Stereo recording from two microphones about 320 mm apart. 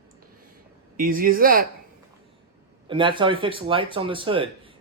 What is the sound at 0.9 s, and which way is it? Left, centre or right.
Speech, right.